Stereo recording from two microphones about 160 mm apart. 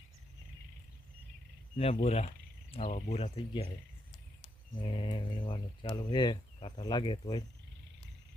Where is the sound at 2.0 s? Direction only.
40° left (ahead or behind).